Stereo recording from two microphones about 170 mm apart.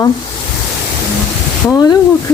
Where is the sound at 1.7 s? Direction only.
25° left (ahead or behind).